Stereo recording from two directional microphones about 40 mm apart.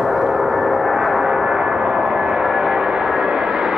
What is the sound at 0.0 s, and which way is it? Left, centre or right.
Gong, centre.